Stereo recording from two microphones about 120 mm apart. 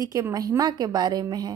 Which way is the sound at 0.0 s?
30° right (ahead or behind).